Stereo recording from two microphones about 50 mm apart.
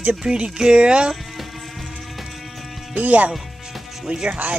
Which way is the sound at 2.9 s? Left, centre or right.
Right.